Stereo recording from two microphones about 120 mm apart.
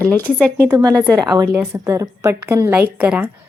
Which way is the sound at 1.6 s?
25° right (ahead or behind).